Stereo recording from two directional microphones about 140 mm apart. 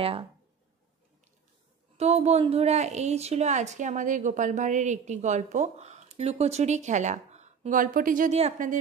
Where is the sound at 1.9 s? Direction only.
50° right (ahead or behind).